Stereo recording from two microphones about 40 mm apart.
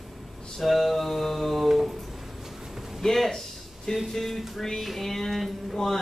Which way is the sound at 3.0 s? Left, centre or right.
Centre.